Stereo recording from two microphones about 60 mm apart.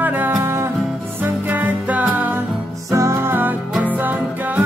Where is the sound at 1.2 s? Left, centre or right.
Right.